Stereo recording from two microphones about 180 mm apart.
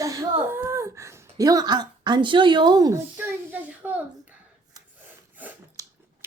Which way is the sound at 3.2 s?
10° right (ahead or behind).